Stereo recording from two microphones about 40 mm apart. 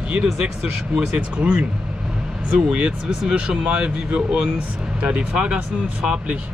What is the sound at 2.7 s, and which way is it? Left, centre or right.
Speech, right.